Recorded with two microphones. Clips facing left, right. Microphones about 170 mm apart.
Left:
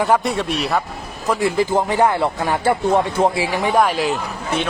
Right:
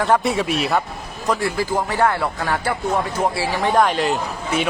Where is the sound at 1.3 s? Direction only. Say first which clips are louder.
Left 3 dB; 20° left (ahead or behind).